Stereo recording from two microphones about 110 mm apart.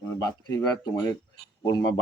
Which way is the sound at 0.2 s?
35° left (ahead or behind).